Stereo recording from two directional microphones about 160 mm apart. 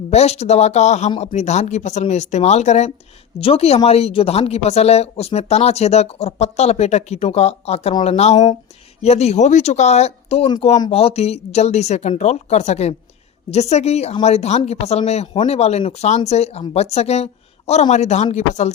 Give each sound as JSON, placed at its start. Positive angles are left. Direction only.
{"t": 0.1, "sound": "speech", "side_deg": 45}